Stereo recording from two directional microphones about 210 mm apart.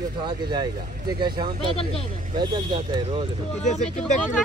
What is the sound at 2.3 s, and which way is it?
Speech, 20° right (ahead or behind).